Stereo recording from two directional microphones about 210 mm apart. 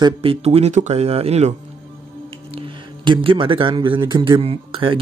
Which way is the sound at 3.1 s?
25° right (ahead or behind).